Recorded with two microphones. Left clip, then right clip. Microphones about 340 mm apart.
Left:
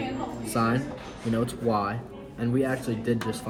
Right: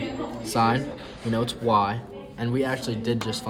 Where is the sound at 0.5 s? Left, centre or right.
Right.